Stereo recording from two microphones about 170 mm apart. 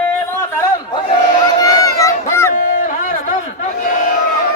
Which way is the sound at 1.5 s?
20° left (ahead or behind).